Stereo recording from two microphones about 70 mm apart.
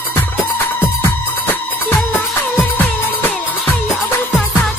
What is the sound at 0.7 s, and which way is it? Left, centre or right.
Music, left.